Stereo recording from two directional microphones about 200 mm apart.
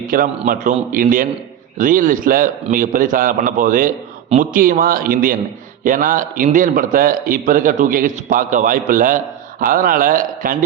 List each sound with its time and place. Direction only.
0.1 s a man's voice: 45° right (ahead or behind)